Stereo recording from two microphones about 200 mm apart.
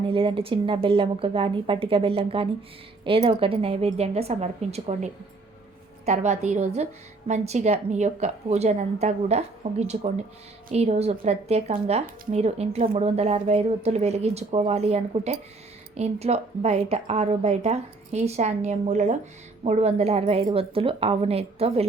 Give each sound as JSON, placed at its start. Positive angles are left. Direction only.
{"t": 0.1, "sound": "a woman's voice", "side_deg": -25}